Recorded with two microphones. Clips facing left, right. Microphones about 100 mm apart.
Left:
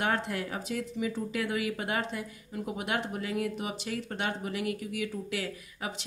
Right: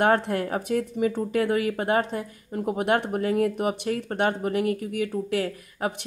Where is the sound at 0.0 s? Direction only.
50° right (ahead or behind).